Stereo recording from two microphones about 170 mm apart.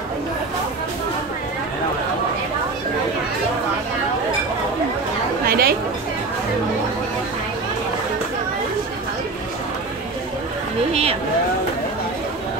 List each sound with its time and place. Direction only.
5.5 s chatter: 65° right (ahead or behind)
10.9 s vehicle: 35° right (ahead or behind)